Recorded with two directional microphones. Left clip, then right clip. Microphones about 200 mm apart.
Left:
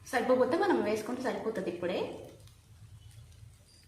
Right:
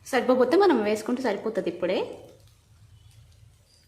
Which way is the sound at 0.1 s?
55° right (ahead or behind).